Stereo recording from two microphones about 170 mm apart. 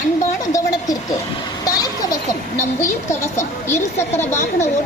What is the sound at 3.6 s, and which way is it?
Speech, 15° left (ahead or behind).